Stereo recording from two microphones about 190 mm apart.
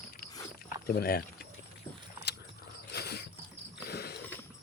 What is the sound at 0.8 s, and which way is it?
Speech, 55° left (ahead or behind).